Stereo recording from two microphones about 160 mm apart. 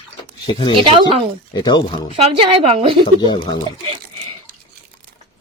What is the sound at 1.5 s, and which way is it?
Speech, 25° left (ahead or behind).